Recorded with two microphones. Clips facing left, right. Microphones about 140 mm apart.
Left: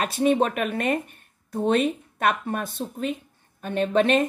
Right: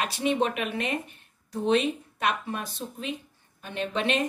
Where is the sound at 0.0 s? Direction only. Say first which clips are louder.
Left 5 dB; 45° left (ahead or behind).